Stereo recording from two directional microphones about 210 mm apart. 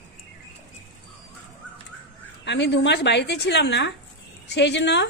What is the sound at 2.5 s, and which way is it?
A woman's voice, 55° left (ahead or behind).